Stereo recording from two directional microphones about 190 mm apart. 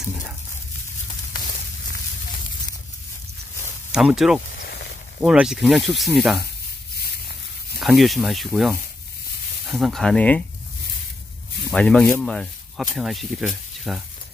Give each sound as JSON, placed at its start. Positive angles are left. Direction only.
{"t": 3.9, "sound": "speech", "side_deg": 0}
{"t": 7.0, "sound": "a sound", "side_deg": 55}
{"t": 7.8, "sound": "speech", "side_deg": 0}
{"t": 11.7, "sound": "speech", "side_deg": 5}